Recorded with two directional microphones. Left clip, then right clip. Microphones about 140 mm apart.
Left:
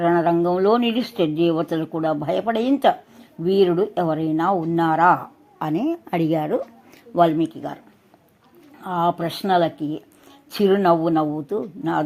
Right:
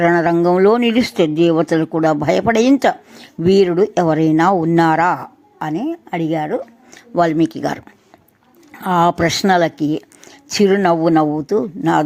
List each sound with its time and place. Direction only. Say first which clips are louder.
0.0 s speech: right 5 dB; 30° right (ahead or behind)
5.5 s a woman's voice: right 2 dB; centre (ahead or behind)
6.9 s speech: right 2 dB; 20° right (ahead or behind); by 7.8 s 35° right (ahead or behind)
8.8 s speech: right 7 dB; 40° right (ahead or behind)